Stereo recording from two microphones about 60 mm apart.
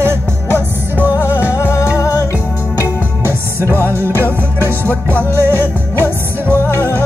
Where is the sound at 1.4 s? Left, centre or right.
Left.